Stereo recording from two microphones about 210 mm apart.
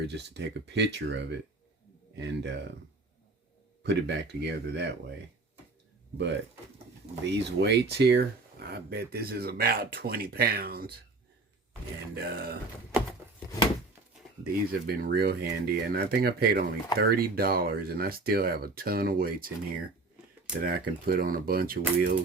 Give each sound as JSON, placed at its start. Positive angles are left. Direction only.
{"t": 0.1, "sound": "speech", "side_deg": -55}
{"t": 3.8, "sound": "speech", "side_deg": -55}
{"t": 7.3, "sound": "speech", "side_deg": -55}
{"t": 12.1, "sound": "speech", "side_deg": -45}
{"t": 14.4, "sound": "speech", "side_deg": -45}
{"t": 20.6, "sound": "speech", "side_deg": -45}